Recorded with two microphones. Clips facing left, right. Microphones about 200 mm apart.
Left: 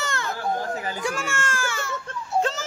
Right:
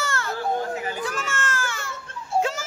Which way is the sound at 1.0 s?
10° left (ahead or behind).